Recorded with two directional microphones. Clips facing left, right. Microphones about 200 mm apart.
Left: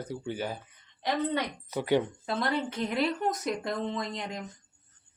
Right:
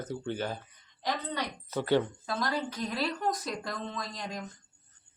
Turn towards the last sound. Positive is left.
turn(degrees=20)  # may be behind; listen again after turning